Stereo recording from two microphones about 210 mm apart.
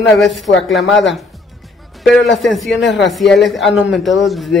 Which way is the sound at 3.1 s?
Centre (ahead or behind).